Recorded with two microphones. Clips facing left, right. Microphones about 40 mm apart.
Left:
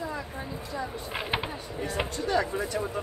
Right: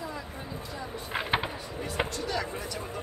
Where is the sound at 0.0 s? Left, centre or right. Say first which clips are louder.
Left 3 dB; left.